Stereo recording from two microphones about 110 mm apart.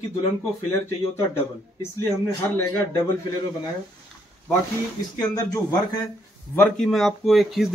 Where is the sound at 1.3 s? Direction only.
20° left (ahead or behind).